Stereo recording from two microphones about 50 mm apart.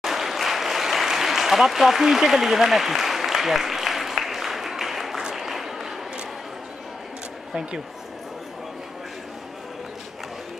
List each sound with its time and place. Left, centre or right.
0.0 s applause: centre